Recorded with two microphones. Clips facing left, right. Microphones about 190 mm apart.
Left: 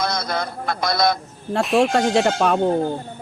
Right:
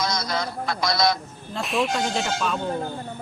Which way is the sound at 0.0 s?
55° left (ahead or behind).